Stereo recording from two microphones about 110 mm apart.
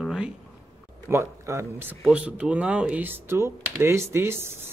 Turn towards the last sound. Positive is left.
turn(degrees=-20)  # may be behind; listen again after turning